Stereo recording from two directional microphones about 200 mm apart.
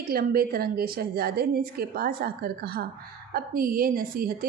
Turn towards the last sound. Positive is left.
turn(degrees=-45)  # may be behind; listen again after turning